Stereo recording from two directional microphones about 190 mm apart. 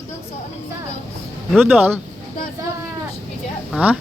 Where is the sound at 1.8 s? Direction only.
10° right (ahead or behind).